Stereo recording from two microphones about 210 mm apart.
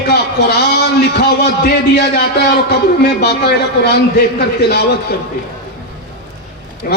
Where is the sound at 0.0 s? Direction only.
50° left (ahead or behind).